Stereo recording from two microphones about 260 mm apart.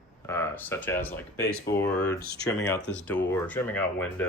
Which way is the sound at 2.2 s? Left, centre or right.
Left.